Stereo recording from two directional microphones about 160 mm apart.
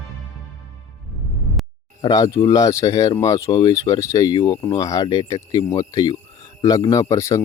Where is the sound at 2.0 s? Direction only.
20° left (ahead or behind).